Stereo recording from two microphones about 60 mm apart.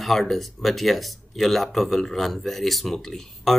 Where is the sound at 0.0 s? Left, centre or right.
Centre.